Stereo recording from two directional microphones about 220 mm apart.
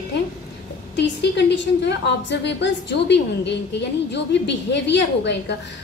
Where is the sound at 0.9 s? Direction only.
50° left (ahead or behind).